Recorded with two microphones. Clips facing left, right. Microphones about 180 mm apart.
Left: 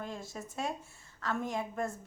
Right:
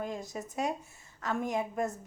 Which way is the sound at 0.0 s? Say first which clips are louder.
Right 4 dB; 20° right (ahead or behind).